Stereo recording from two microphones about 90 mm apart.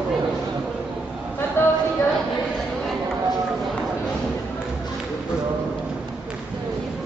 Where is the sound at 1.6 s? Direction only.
25° left (ahead or behind).